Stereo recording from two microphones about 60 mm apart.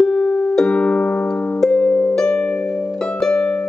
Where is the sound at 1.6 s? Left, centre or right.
Centre.